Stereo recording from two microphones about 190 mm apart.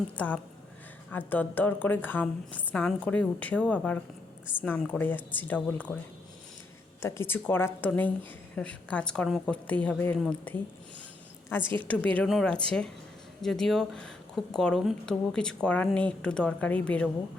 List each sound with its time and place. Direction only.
0.2 s a woman's voice: 5° left (ahead or behind)
7.0 s a woman's voice: 15° left (ahead or behind)
11.6 s a woman's voice: 25° right (ahead or behind)
11.9 s speech: 5° left (ahead or behind)